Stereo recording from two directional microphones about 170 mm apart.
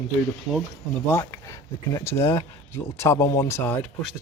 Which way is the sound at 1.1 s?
15° left (ahead or behind).